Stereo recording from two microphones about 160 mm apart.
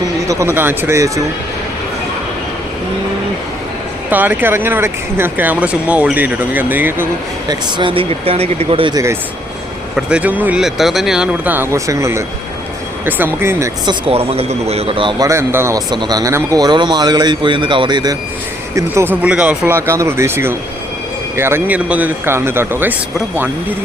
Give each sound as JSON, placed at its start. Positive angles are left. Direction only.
{"t": 0.3, "sound": "speech", "side_deg": -15}
{"t": 4.1, "sound": "speech", "side_deg": -10}
{"t": 7.4, "sound": "speech", "side_deg": -30}
{"t": 9.9, "sound": "speech", "side_deg": -5}
{"t": 14.1, "sound": "speech", "side_deg": -40}
{"t": 15.3, "sound": "speech", "side_deg": -15}